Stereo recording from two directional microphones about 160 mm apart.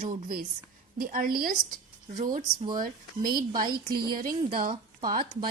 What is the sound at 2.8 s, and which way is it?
A woman's voice, 65° right (ahead or behind).